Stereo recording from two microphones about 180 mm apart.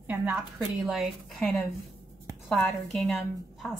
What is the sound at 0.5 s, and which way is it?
A woman's voice, centre (ahead or behind).